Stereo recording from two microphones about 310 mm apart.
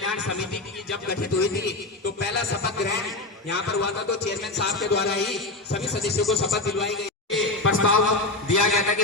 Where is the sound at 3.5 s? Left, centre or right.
Left.